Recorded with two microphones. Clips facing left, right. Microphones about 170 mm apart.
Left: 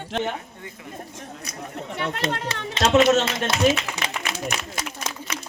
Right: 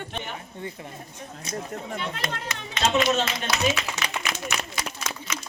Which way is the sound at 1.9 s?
65° left (ahead or behind).